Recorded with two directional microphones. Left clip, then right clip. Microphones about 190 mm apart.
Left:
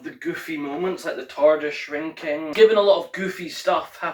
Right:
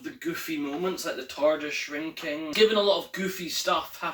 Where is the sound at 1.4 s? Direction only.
20° right (ahead or behind).